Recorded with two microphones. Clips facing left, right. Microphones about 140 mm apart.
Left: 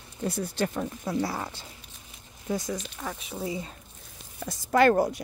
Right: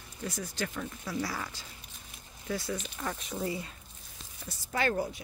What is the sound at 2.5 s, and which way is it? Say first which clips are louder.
Speech: left 4 dB; 15° left (ahead or behind).